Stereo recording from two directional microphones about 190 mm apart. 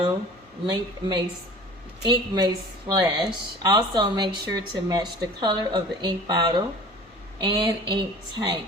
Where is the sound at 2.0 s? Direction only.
20° right (ahead or behind).